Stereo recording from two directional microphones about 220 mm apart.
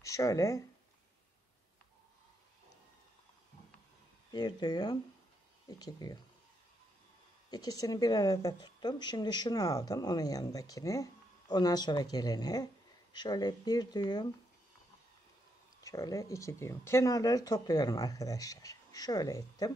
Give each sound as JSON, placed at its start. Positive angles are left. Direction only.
{"t": 0.0, "sound": "a woman's voice", "side_deg": 15}
{"t": 4.3, "sound": "a woman's voice", "side_deg": 20}
{"t": 7.5, "sound": "a woman's voice", "side_deg": 15}
{"t": 15.8, "sound": "a woman's voice", "side_deg": 15}